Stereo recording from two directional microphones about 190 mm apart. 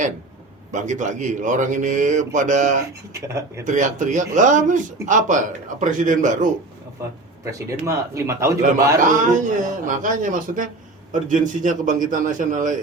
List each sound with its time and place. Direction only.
0.7 s speech: 40° right (ahead or behind)
3.1 s a man's voice: 15° right (ahead or behind)
3.7 s a man's voice: 40° right (ahead or behind)
7.0 s a man's voice: 15° right (ahead or behind)
9.6 s a man's voice: 45° right (ahead or behind)